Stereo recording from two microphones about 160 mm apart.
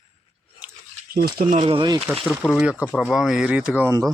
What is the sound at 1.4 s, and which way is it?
Speech, 50° right (ahead or behind).